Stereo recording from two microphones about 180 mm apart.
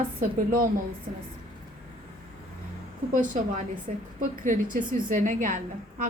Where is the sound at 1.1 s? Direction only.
45° right (ahead or behind).